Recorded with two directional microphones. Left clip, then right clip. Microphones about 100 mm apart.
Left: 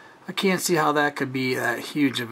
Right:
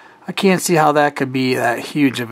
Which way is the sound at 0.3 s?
15° right (ahead or behind).